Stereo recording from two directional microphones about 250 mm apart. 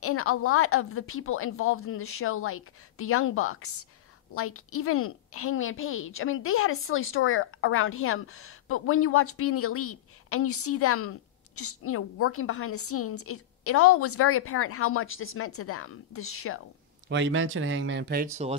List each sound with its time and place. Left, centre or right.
0.0 s a woman's voice: left
17.1 s speech: right